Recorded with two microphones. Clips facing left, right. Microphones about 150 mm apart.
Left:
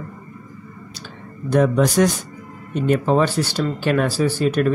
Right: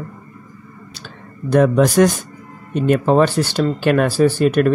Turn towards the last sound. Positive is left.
turn(degrees=-60)  # may be behind; listen again after turning